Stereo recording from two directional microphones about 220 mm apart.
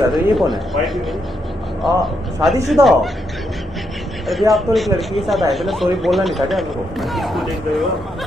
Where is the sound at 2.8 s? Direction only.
15° right (ahead or behind).